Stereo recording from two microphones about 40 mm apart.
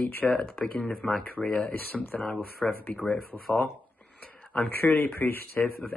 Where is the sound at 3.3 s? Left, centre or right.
Left.